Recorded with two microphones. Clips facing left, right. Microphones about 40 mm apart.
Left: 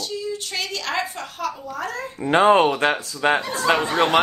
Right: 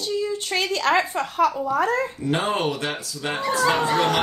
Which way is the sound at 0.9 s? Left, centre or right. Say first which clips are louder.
Right 8 dB; right.